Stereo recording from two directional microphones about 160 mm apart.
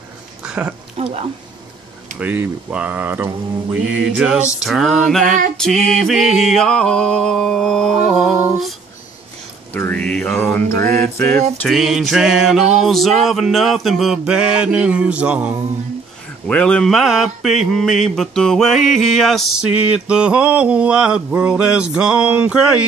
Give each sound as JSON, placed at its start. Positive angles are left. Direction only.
{"t": 0.4, "sound": "a sound", "side_deg": -10}
{"t": 1.0, "sound": "speech", "side_deg": -40}
{"t": 2.1, "sound": "speech", "side_deg": -10}
{"t": 4.6, "sound": "mantra", "side_deg": 0}
{"t": 9.8, "sound": "mantra", "side_deg": 10}
{"t": 10.8, "sound": "mantra", "side_deg": -65}
{"t": 11.6, "sound": "mantra", "side_deg": 0}
{"t": 16.4, "sound": "mantra", "side_deg": 5}